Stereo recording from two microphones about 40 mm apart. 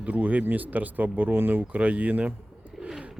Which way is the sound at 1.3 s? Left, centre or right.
Right.